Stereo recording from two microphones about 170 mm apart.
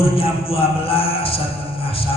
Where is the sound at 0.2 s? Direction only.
35° left (ahead or behind).